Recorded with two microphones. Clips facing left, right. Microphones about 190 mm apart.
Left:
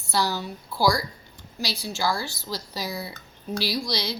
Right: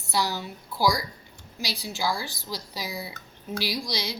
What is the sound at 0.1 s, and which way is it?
A woman's voice, 15° right (ahead or behind).